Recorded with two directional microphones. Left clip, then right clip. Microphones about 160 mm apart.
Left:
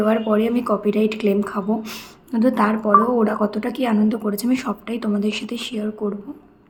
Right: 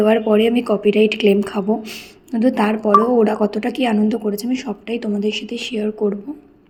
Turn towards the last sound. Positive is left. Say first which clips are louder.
# right 6 dB
turn(degrees=-15)  # may be behind; listen again after turning